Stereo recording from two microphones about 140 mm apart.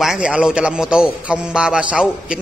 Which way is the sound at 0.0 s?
5° right (ahead or behind).